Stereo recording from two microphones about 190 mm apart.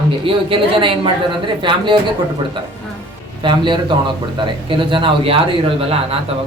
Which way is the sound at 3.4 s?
25° right (ahead or behind).